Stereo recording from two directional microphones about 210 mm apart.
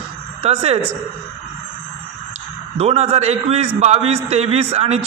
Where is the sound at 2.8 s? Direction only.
30° right (ahead or behind).